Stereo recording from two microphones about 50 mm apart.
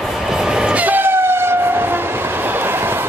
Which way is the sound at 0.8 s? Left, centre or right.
Right.